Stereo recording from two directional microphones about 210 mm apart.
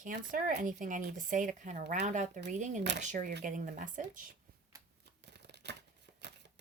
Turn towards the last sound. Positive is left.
turn(degrees=-55)  # may be behind; listen again after turning